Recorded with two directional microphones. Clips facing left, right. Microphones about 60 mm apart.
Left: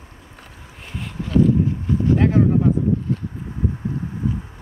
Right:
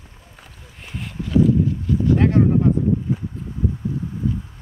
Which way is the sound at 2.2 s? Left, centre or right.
Centre.